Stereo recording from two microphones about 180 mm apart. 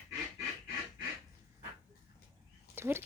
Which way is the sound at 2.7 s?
15° right (ahead or behind).